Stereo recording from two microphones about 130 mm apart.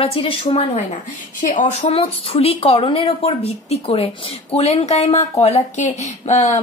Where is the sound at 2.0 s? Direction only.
45° left (ahead or behind).